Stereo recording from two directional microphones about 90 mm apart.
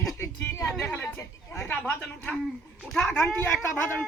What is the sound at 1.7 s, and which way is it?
Speech, 15° left (ahead or behind).